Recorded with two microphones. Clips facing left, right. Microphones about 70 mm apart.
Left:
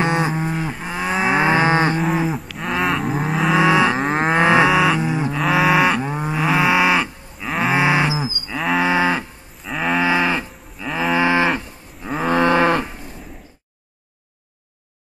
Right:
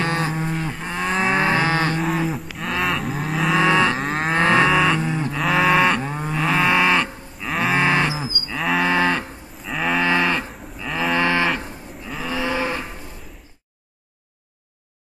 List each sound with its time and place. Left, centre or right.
0.0 s cattle: centre
2.0 s cattle: centre
4.4 s cattle: centre
5.4 s livestock: centre
8.5 s cattle: centre
12.2 s cattle: left